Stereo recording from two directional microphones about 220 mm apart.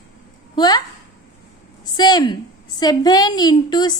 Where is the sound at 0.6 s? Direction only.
20° left (ahead or behind).